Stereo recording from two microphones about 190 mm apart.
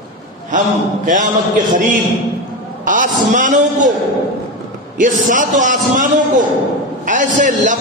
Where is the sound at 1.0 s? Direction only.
40° right (ahead or behind).